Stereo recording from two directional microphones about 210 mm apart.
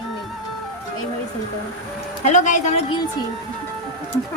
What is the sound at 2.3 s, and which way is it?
Speech, 35° left (ahead or behind).